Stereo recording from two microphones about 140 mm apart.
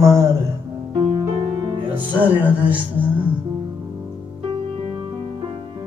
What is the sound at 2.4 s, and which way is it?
Speech, 10° right (ahead or behind).